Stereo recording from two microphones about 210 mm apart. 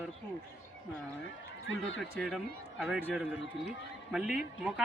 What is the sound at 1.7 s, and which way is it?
Speech, 65° left (ahead or behind).